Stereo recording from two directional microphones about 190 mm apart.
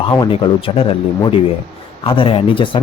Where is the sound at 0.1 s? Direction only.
25° left (ahead or behind).